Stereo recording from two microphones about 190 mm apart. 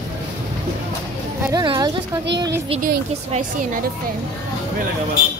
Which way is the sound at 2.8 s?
50° right (ahead or behind).